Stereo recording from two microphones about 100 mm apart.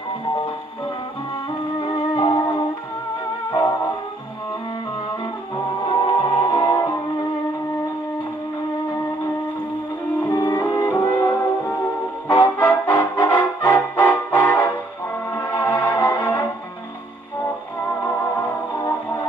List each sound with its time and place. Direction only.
1.8 s music: 65° left (ahead or behind)
2.2 s music: 30° left (ahead or behind)
5.9 s music: 60° left (ahead or behind)
10.2 s music: 25° left (ahead or behind)